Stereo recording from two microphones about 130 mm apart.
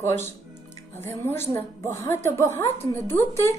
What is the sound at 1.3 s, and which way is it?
A woman's voice, 20° left (ahead or behind).